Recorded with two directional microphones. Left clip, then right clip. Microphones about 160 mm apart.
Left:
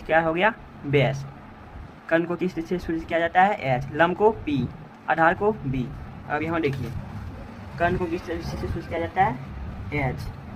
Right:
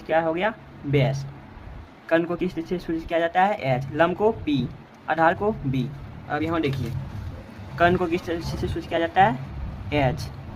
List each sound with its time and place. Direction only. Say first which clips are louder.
0.1 s speech: left 2 dB; 5° right (ahead or behind)
2.0 s speech: right 1 dB; 20° right (ahead or behind)
7.8 s speech: right 4 dB; 55° right (ahead or behind)
9.0 s speech: right 4 dB; 70° right (ahead or behind)